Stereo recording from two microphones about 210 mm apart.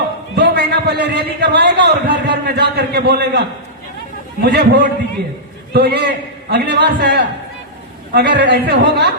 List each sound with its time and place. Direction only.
0.3 s a man's voice: 50° right (ahead or behind)